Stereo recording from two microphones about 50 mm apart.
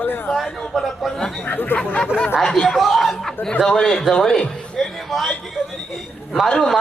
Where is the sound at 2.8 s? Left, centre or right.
Centre.